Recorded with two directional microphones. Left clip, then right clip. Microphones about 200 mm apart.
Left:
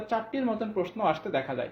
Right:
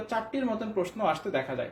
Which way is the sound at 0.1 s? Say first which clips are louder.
Left 1 dB; 40° left (ahead or behind).